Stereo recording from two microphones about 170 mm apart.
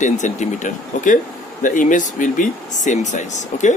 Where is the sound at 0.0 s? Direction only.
45° left (ahead or behind).